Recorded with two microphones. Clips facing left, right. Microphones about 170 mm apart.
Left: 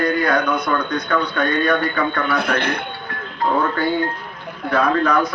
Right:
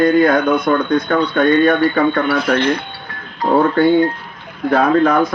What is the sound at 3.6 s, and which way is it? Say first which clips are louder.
Speech: right 7 dB; 30° right (ahead or behind).